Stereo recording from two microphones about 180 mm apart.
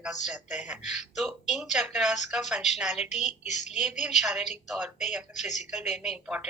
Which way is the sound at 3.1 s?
40° left (ahead or behind).